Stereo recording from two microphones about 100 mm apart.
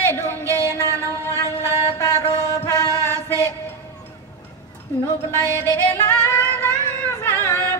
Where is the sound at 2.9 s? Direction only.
30° right (ahead or behind).